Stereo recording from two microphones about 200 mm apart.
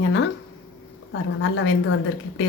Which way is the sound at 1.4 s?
75° left (ahead or behind).